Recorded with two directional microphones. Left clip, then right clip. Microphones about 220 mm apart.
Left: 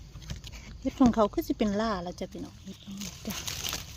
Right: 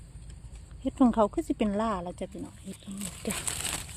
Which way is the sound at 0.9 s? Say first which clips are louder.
Even; centre (ahead or behind).